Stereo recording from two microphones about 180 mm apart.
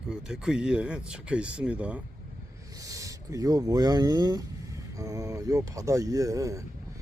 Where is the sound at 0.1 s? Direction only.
5° right (ahead or behind).